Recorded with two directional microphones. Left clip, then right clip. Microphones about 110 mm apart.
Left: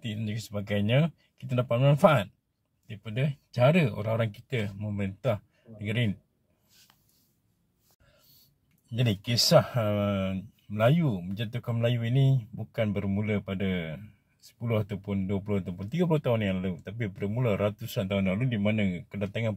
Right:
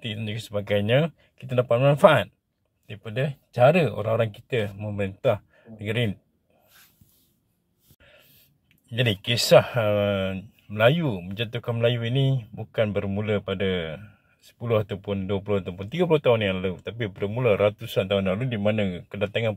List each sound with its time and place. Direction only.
0.6 s speech: 15° left (ahead or behind)
8.9 s speech: 20° left (ahead or behind)
18.2 s speech: 10° left (ahead or behind)
19.0 s speech: 25° left (ahead or behind)